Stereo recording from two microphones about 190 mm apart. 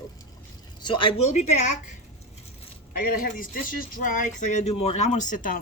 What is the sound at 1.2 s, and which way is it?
Speech, 35° left (ahead or behind).